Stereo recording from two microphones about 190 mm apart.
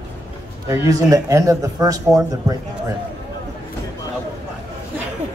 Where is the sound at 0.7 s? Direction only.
20° right (ahead or behind).